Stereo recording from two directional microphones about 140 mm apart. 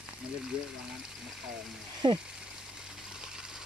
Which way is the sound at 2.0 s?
35° right (ahead or behind).